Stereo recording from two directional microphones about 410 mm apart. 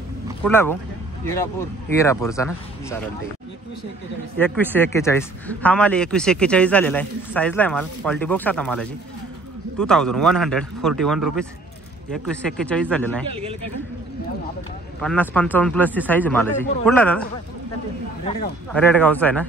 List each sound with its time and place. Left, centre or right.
0.4 s a man's voice: centre
2.0 s speech: centre
4.4 s a man's voice: centre
15.0 s a man's voice: centre
18.7 s a man's voice: centre